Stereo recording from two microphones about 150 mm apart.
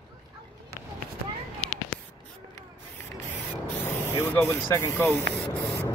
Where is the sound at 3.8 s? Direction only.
15° left (ahead or behind).